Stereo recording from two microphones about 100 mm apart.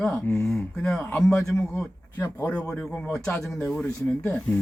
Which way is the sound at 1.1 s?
5° left (ahead or behind).